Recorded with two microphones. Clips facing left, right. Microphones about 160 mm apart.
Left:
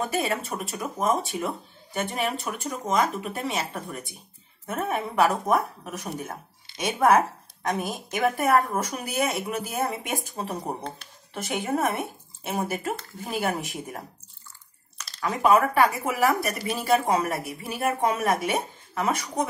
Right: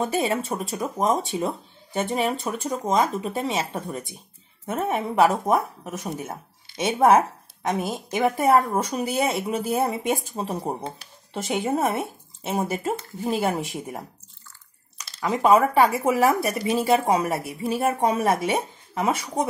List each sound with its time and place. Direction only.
0.1 s speech: 30° right (ahead or behind)
2.9 s a woman's voice: 25° right (ahead or behind)